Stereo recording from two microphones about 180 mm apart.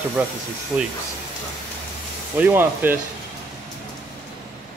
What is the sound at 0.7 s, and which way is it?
Speech, 10° right (ahead or behind).